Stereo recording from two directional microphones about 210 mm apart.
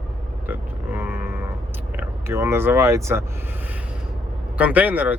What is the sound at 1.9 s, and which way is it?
Speech, 10° right (ahead or behind).